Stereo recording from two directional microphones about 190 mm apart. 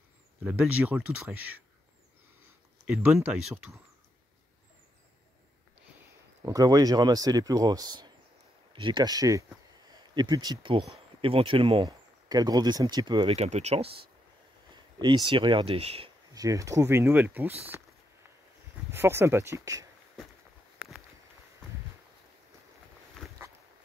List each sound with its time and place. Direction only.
0.4 s speech: 10° right (ahead or behind)
2.8 s speech: 5° right (ahead or behind)
6.4 s speech: 20° right (ahead or behind)
16.3 s speech: 15° right (ahead or behind)
18.9 s speech: 15° right (ahead or behind)